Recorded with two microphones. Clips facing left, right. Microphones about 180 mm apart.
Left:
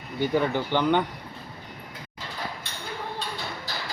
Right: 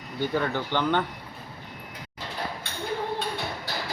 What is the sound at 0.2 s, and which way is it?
Speech, 15° left (ahead or behind).